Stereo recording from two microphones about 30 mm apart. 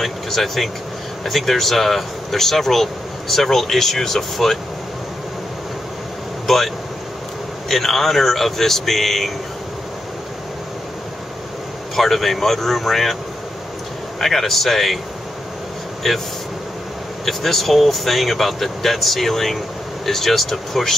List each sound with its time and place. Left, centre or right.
0.0 s speech: centre
6.4 s speech: centre
11.9 s speech: centre
14.2 s speech: centre
16.0 s speech: centre